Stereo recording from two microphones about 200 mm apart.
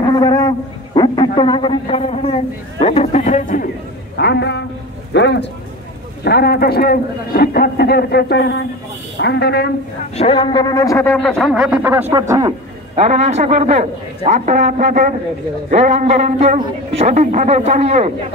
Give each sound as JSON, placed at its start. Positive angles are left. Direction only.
{"t": 0.0, "sound": "a sound", "side_deg": 20}
{"t": 0.9, "sound": "a man's voice", "side_deg": 20}
{"t": 4.2, "sound": "a woman's voice", "side_deg": 55}
{"t": 10.1, "sound": "speech", "side_deg": 30}
{"t": 12.9, "sound": "a man's voice", "side_deg": -30}
{"t": 17.0, "sound": "a man's voice", "side_deg": -35}